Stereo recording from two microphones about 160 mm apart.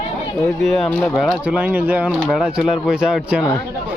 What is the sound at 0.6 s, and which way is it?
Speech, centre (ahead or behind).